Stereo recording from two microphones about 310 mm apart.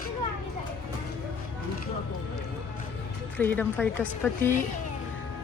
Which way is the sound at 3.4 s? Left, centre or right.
Centre.